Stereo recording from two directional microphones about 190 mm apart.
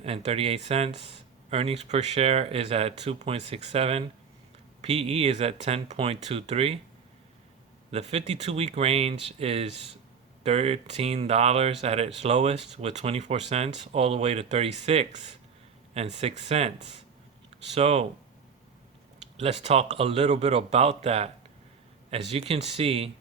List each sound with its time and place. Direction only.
0.0 s speech: 30° right (ahead or behind)
7.9 s speech: 35° right (ahead or behind)
19.4 s speech: 35° right (ahead or behind)